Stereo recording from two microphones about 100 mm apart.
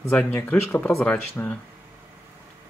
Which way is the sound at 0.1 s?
20° left (ahead or behind).